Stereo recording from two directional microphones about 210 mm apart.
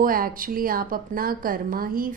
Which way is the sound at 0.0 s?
40° right (ahead or behind).